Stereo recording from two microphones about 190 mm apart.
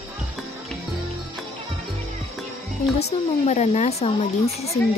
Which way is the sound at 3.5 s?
35° left (ahead or behind).